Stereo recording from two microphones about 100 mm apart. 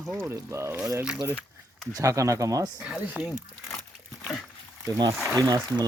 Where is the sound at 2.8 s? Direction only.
10° right (ahead or behind).